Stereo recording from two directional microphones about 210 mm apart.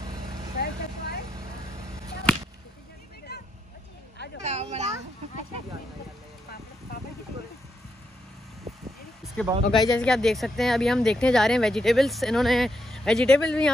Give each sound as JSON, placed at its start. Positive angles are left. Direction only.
{"t": 0.6, "sound": "vehicle", "side_deg": 50}
{"t": 3.3, "sound": "vehicle", "side_deg": 50}
{"t": 4.4, "sound": "speech", "side_deg": -30}
{"t": 9.2, "sound": "speech", "side_deg": 5}